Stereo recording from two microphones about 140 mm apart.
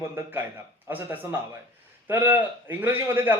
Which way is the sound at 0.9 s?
15° right (ahead or behind).